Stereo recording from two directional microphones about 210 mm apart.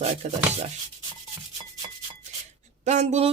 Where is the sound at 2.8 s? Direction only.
30° right (ahead or behind).